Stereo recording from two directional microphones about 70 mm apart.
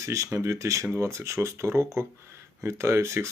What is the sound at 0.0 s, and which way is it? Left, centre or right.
Speech, right.